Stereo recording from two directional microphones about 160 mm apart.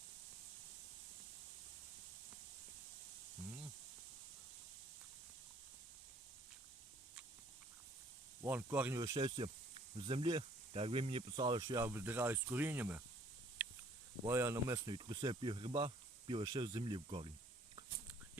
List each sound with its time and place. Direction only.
8.4 s speech: 10° right (ahead or behind)
9.0 s speech: 25° right (ahead or behind)
11.8 s speech: 15° right (ahead or behind)
13.6 s a sound: 10° right (ahead or behind)
14.3 s speech: 15° right (ahead or behind); by 17.3 s 35° right (ahead or behind)